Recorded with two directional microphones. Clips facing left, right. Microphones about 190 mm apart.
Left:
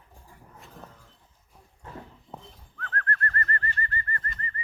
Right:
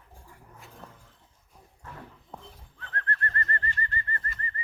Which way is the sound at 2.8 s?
25° right (ahead or behind).